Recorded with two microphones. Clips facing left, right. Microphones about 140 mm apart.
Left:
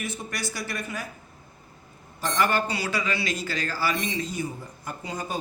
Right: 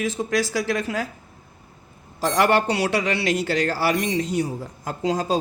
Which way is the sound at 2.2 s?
85° right.